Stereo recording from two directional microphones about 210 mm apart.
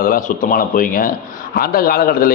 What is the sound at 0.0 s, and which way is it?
Speech, 40° left (ahead or behind).